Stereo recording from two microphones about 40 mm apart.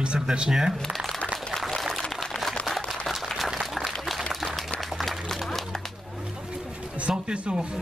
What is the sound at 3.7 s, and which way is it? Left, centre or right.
Applause, centre.